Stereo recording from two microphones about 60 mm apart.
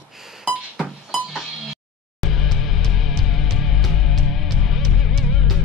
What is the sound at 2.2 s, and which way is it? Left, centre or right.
Music, centre.